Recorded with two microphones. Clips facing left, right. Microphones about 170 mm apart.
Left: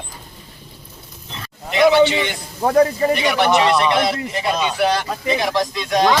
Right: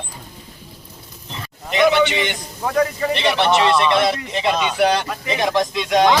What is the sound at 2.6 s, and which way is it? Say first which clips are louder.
Speech: left 5 dB; 30° left (ahead or behind).